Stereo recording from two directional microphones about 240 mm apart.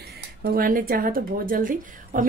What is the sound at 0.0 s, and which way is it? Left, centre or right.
A woman's voice, right.